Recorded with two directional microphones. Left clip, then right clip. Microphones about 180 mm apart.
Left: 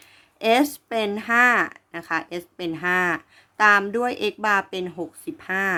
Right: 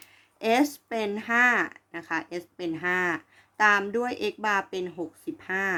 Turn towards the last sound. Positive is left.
turn(degrees=30)  # may be behind; listen again after turning